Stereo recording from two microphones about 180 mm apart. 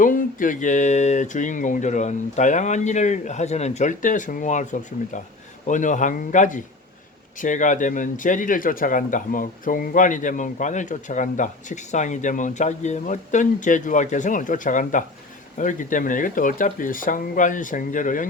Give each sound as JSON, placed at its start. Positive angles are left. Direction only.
{"t": 0.0, "sound": "a man's voice", "side_deg": 50}